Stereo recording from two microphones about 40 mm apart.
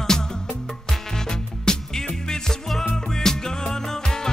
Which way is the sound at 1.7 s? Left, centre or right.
Centre.